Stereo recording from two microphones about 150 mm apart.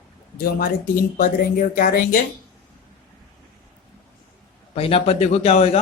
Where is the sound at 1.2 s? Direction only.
65° left (ahead or behind).